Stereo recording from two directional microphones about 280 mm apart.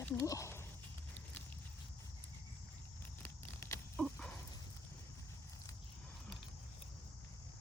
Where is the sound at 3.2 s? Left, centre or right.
Centre.